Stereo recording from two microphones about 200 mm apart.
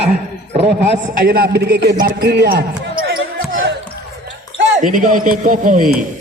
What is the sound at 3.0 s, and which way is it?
Basketball bounce, 50° right (ahead or behind).